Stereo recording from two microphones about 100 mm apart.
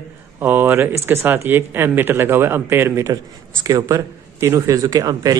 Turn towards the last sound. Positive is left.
turn(degrees=-40)  # may be behind; listen again after turning